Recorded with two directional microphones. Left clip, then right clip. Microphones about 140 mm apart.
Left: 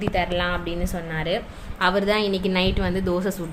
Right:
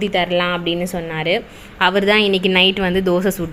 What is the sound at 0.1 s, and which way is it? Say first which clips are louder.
Speech: right 3 dB; 35° right (ahead or behind).